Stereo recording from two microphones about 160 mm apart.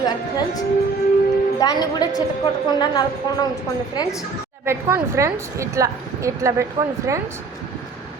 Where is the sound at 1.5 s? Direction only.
25° left (ahead or behind).